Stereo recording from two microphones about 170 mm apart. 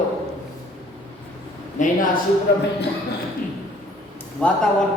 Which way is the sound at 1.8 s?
45° left (ahead or behind).